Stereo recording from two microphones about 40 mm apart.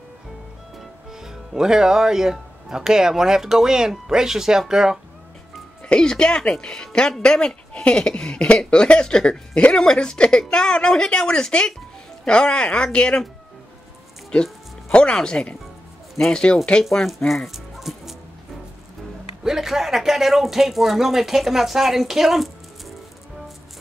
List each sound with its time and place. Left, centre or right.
1.1 s speech: centre
5.9 s speech: centre
14.3 s music: left
15.4 s speech: left
16.2 s speech: centre
17.3 s dog: centre
19.4 s speech: centre